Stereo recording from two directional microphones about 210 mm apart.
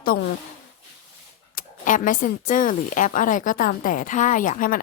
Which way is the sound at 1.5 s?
40° left (ahead or behind).